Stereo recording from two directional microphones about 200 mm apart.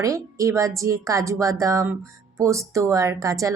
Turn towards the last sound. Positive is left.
turn(degrees=-15)  # may be behind; listen again after turning